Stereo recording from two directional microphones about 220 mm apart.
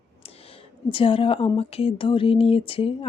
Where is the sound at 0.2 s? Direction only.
25° left (ahead or behind).